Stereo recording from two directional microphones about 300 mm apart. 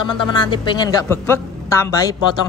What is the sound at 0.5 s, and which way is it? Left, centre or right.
A woman's voice, centre.